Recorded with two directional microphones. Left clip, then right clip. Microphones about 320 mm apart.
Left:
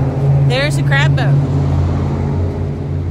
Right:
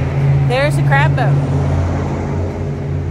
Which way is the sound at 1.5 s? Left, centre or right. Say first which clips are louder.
Right 1 dB; right.